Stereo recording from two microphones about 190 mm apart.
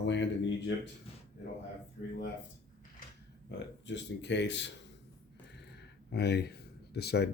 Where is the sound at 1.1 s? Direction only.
30° left (ahead or behind).